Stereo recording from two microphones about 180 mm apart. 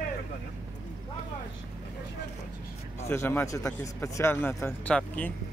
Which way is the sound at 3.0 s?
15° left (ahead or behind).